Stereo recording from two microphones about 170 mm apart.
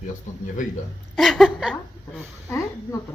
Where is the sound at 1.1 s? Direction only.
Centre (ahead or behind).